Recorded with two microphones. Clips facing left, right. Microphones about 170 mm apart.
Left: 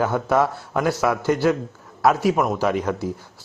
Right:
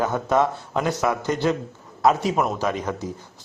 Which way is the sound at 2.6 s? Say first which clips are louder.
Left 4 dB; 10° left (ahead or behind).